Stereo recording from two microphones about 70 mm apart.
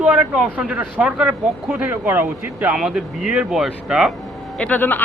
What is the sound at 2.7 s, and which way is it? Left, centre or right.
Speech, centre.